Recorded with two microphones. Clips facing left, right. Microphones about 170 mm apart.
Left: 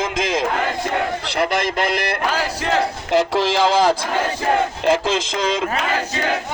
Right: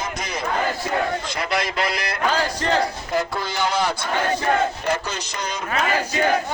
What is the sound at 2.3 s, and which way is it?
Battle cry, 5° left (ahead or behind).